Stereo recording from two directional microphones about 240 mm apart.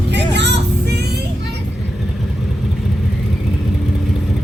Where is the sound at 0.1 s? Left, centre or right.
Right.